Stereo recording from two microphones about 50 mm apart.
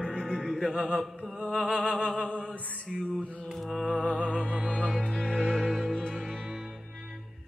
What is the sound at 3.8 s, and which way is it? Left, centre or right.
Music, centre.